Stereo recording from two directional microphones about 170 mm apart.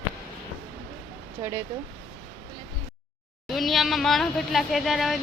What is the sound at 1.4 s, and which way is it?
Speech, 15° right (ahead or behind).